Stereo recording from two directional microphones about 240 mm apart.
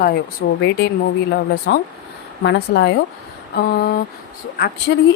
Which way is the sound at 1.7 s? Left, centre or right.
Left.